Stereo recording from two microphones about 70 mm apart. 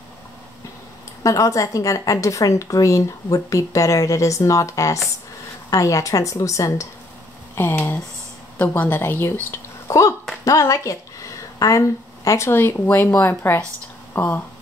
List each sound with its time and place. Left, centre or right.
1.2 s a woman's voice: left
7.5 s a woman's voice: left
8.9 s speech: left
9.8 s a woman's voice: left
12.4 s speech: left